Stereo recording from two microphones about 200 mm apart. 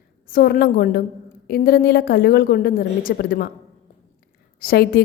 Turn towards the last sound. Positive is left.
turn(degrees=50)  # may be behind; listen again after turning